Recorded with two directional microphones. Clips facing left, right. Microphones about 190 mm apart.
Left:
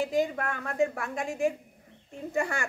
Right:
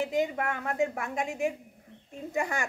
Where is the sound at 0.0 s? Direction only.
20° right (ahead or behind).